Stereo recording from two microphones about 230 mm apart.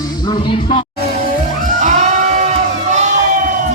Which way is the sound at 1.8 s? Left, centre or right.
Right.